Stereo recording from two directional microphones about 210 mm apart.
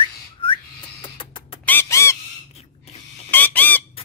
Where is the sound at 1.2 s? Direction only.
25° left (ahead or behind).